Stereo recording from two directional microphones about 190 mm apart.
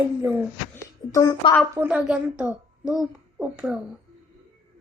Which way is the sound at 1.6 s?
5° right (ahead or behind).